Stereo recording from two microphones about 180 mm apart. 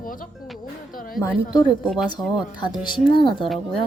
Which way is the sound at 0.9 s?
50° left (ahead or behind).